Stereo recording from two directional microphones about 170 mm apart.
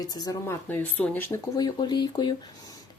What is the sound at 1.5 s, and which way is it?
Speech, 25° left (ahead or behind).